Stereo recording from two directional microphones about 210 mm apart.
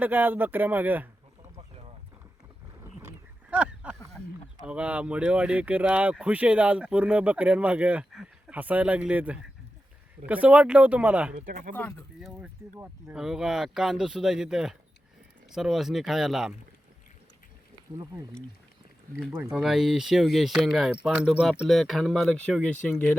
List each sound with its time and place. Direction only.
0.0 s speech: 10° right (ahead or behind)
3.5 s a sound: 5° right (ahead or behind)
4.6 s speech: 5° right (ahead or behind)
11.3 s speech: 40° right (ahead or behind)
11.7 s speech: 5° left (ahead or behind)
12.4 s speech: 10° right (ahead or behind)
17.9 s speech: 15° right (ahead or behind); by 23.1 s 5° left (ahead or behind)